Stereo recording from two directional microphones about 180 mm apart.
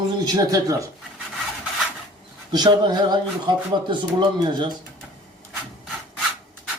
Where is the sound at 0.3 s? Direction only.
20° right (ahead or behind).